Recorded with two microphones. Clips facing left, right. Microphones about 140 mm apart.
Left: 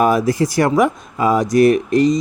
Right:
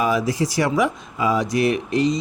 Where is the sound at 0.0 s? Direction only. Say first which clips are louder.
Left 5 dB; 50° left (ahead or behind).